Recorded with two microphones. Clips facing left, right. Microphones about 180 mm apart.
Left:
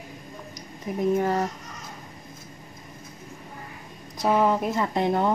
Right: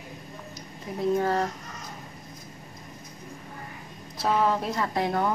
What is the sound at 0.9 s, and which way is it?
Speech, 15° left (ahead or behind).